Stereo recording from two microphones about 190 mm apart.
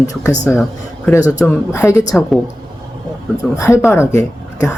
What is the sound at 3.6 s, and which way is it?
Speech, 15° left (ahead or behind).